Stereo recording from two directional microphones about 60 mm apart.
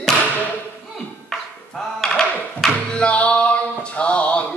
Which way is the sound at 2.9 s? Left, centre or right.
Left.